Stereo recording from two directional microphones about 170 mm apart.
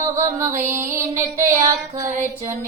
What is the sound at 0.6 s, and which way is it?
Music, 50° right (ahead or behind).